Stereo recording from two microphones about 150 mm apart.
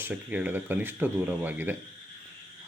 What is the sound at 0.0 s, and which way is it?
Speech, 10° right (ahead or behind).